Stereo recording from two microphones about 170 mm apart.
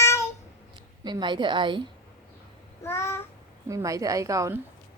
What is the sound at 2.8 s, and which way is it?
Babbling, 15° left (ahead or behind).